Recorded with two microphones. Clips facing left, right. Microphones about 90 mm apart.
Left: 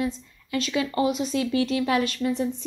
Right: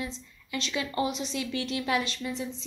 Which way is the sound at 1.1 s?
40° left (ahead or behind).